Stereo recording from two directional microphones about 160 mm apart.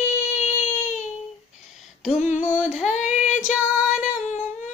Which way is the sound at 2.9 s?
45° left (ahead or behind).